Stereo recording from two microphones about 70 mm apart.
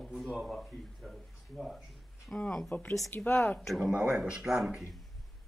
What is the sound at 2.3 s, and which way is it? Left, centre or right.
Speech, centre.